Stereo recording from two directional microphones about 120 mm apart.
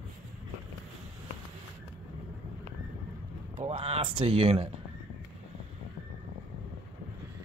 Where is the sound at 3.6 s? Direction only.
55° right (ahead or behind).